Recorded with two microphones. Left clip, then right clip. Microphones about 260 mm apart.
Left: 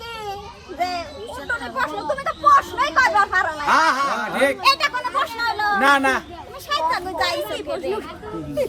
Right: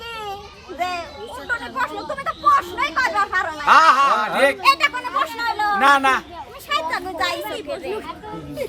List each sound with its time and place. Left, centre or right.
0.8 s children playing: centre
1.5 s chatter: centre
3.7 s speech: centre
6.7 s a sound: centre
7.3 s speech: centre